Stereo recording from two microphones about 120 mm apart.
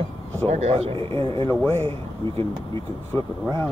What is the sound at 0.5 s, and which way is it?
Speech, 65° right (ahead or behind).